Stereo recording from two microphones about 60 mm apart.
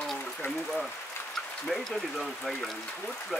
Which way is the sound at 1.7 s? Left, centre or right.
Centre.